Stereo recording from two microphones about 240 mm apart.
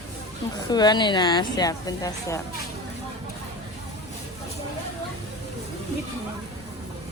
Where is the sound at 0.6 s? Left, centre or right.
Centre.